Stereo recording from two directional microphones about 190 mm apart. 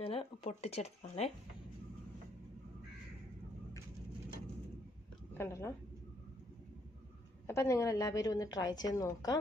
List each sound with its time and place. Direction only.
0.0 s speech: 30° left (ahead or behind)
5.4 s a woman's voice: 15° left (ahead or behind)
7.4 s a woman's voice: 15° left (ahead or behind)